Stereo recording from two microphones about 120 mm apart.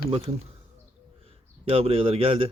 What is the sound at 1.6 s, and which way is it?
Speech, 55° right (ahead or behind).